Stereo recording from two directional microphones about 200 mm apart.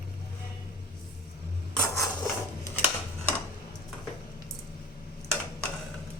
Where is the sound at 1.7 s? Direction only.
Centre (ahead or behind).